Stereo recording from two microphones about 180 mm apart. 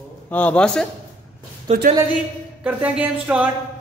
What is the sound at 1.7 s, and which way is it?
Speech, 35° right (ahead or behind).